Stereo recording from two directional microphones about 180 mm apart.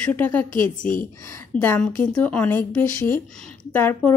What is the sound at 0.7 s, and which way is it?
Speech, 45° left (ahead or behind).